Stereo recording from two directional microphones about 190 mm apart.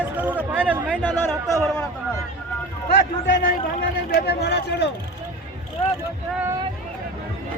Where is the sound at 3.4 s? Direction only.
55° left (ahead or behind).